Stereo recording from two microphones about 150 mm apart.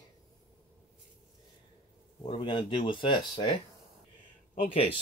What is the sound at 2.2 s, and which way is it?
Speech, 30° left (ahead or behind).